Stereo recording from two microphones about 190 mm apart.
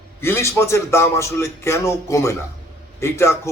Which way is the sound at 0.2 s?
15° left (ahead or behind).